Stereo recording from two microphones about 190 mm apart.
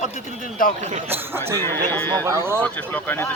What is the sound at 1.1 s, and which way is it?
Speech, 10° right (ahead or behind).